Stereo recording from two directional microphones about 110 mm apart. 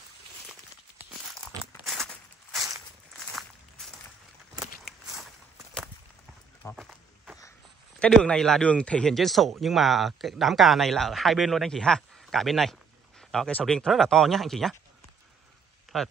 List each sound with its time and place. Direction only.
1.9 s walk: centre (ahead or behind)
6.6 s run: 30° left (ahead or behind)
8.0 s speech: 10° left (ahead or behind)
15.9 s speech: 5° left (ahead or behind)